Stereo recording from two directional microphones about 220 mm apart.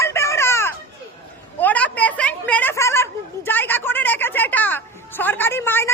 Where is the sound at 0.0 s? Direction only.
15° left (ahead or behind).